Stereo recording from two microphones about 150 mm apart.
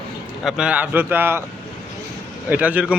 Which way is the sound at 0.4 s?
5° right (ahead or behind).